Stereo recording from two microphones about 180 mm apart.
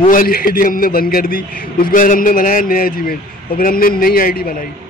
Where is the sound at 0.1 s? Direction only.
55° left (ahead or behind).